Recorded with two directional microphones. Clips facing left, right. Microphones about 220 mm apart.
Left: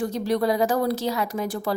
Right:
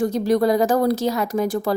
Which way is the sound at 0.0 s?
45° right (ahead or behind).